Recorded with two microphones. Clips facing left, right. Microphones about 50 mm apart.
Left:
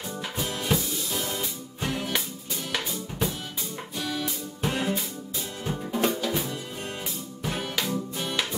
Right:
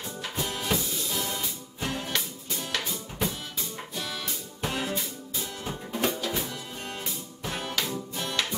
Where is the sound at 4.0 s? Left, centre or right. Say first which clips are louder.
Left 6 dB; centre.